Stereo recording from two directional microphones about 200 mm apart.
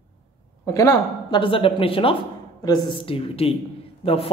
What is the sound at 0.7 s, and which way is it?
Speech, 20° left (ahead or behind).